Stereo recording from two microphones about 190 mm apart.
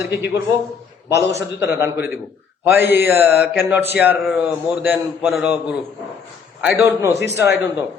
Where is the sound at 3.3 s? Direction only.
60° left (ahead or behind).